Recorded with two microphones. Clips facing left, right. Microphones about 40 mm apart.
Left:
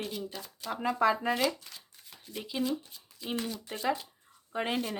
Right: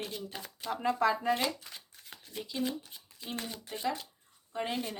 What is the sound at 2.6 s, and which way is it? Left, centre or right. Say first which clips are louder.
Speech: left 3 dB; right.